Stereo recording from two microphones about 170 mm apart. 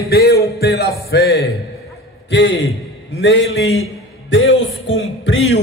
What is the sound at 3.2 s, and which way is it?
Speech, 90° left.